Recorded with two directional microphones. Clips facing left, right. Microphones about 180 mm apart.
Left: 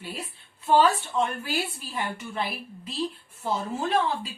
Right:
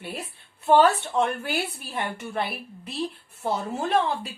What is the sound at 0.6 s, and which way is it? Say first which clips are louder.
Speech: right 2 dB; 60° right (ahead or behind).